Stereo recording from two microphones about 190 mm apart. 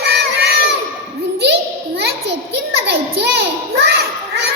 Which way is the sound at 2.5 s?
60° right (ahead or behind).